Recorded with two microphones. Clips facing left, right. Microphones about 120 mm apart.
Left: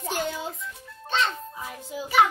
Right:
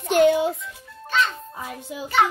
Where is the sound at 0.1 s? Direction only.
65° right (ahead or behind).